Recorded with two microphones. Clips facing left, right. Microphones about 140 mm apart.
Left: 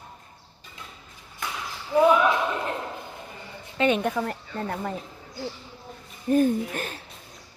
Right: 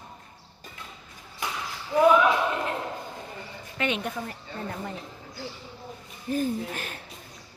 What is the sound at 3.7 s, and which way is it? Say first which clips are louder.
Speech: left 6 dB; 40° left (ahead or behind).